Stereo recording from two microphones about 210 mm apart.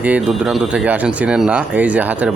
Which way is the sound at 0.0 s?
5° right (ahead or behind).